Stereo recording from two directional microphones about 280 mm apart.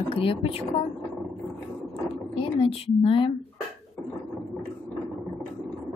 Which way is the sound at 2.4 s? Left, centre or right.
Centre.